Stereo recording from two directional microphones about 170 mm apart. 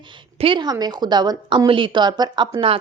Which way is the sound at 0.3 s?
30° right (ahead or behind).